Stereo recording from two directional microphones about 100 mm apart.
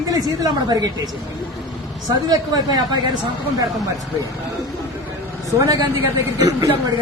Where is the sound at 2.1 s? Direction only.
40° right (ahead or behind).